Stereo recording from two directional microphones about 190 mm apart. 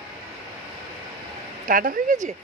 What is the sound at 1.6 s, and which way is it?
Speech, 45° right (ahead or behind).